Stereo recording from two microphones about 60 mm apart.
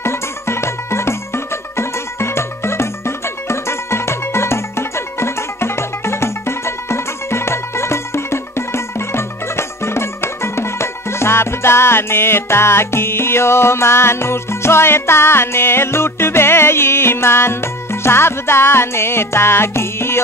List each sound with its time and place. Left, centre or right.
0.0 s music: left